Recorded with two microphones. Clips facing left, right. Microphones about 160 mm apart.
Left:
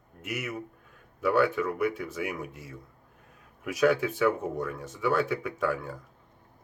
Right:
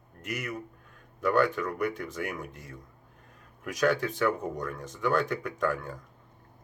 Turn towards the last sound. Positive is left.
turn(degrees=5)  # may be behind; listen again after turning